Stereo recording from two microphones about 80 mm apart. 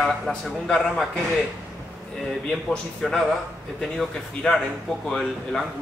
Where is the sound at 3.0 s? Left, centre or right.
Centre.